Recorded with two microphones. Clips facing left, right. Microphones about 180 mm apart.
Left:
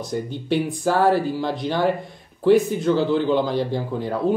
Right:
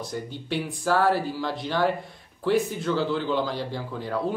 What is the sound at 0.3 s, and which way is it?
A man's voice, 20° left (ahead or behind).